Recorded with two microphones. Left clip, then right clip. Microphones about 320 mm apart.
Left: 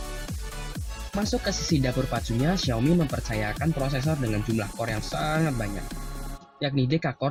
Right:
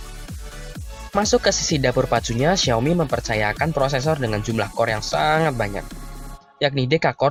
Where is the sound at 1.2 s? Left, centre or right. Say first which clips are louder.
Right 9 dB; right.